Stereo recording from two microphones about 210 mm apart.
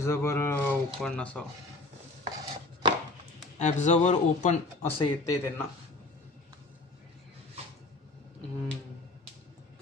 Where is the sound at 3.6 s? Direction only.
35° left (ahead or behind).